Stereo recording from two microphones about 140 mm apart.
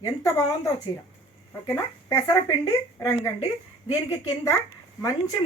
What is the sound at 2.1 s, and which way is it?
Speech, 20° left (ahead or behind).